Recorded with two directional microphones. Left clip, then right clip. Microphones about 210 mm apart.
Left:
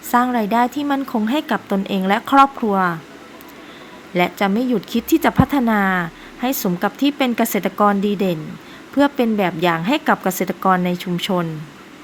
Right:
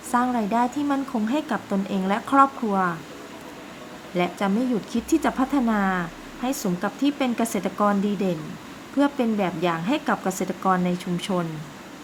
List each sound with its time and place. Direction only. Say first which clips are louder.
0.1 s speech: left 6 dB; 25° left (ahead or behind)
4.1 s speech: left 6 dB; 25° left (ahead or behind)